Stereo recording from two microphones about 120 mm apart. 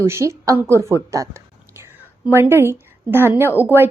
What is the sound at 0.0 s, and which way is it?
A woman's voice, 20° right (ahead or behind).